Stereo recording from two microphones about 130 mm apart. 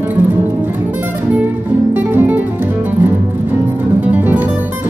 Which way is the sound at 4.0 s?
10° right (ahead or behind).